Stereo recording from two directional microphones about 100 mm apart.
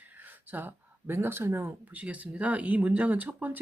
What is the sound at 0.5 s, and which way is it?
Speech, 20° right (ahead or behind).